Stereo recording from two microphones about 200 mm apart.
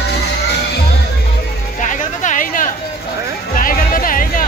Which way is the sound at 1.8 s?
40° left (ahead or behind).